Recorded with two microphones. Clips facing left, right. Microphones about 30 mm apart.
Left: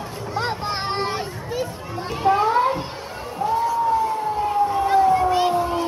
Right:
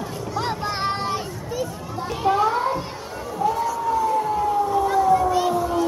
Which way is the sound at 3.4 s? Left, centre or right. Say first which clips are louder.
Left 1 dB; centre.